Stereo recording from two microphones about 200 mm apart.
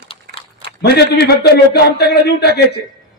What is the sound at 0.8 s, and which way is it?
Speech, 55° left (ahead or behind).